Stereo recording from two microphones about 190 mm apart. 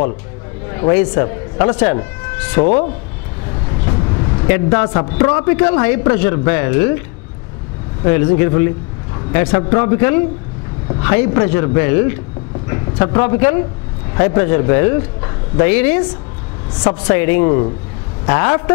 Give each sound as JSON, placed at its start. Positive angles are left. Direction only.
{"t": 0.7, "sound": "speech", "side_deg": 15}
{"t": 2.6, "sound": "speech", "side_deg": 45}
{"t": 3.8, "sound": "speech", "side_deg": 20}
{"t": 8.0, "sound": "a man's voice", "side_deg": 15}
{"t": 17.0, "sound": "a man's voice", "side_deg": 15}